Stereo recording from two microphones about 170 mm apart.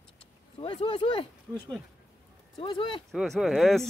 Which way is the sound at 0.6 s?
35° left (ahead or behind).